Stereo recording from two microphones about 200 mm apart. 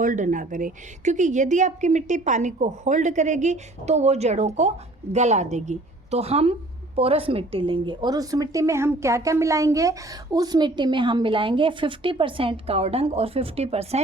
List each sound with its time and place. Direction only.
0.0 s a woman's voice: 40° right (ahead or behind)